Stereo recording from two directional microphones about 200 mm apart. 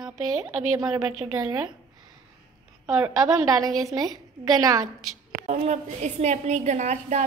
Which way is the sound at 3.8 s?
20° right (ahead or behind).